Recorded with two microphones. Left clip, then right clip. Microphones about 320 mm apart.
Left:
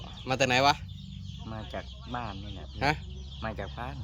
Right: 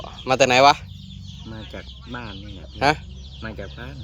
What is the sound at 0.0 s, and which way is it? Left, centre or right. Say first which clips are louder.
Speech: right 10 dB; centre.